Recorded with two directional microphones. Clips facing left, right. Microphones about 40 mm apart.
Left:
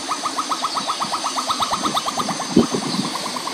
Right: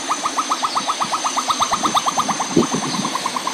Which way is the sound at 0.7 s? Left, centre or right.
Right.